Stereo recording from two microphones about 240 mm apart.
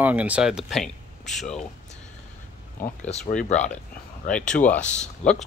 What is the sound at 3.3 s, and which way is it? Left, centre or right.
Speech, left.